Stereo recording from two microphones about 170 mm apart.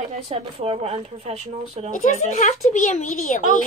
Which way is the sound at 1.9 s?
45° left (ahead or behind).